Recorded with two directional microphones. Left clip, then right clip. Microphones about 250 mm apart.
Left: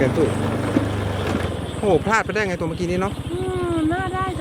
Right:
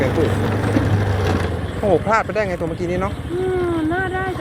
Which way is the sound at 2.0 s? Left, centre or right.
Left.